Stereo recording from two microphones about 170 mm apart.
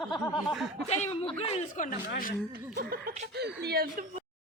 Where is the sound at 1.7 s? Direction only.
50° left (ahead or behind).